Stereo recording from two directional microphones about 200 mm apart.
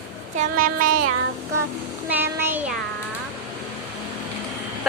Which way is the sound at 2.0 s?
10° right (ahead or behind).